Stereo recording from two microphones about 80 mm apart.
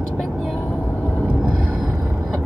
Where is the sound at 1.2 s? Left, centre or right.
Centre.